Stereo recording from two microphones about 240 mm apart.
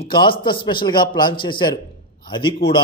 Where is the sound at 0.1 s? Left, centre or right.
Centre.